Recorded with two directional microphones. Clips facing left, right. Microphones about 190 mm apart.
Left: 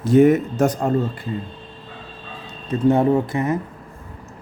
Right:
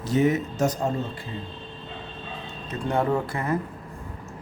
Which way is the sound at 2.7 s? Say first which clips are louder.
Left 8 dB; 25° left (ahead or behind).